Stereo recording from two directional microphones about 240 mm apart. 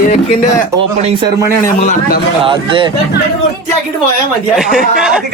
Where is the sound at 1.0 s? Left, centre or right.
Centre.